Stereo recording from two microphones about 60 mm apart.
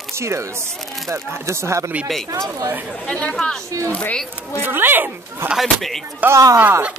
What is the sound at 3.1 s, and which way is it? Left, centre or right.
Speech, centre.